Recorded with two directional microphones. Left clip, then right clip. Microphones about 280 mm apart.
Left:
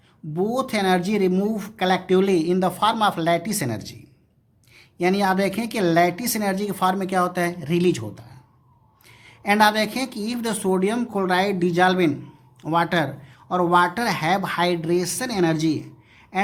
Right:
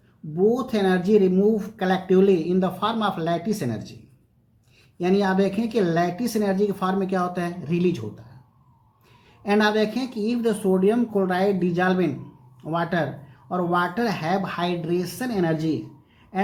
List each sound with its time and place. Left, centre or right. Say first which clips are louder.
0.7 s speech: right 1 dB; left
4.9 s speech: left 1 dB; left
9.4 s speech: left 3 dB; left